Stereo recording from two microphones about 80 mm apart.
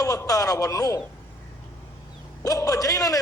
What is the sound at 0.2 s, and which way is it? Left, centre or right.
Speech, left.